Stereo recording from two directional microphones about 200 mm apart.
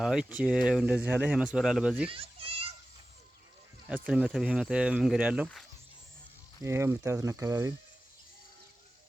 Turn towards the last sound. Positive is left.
turn(degrees=-15)  # may be behind; listen again after turning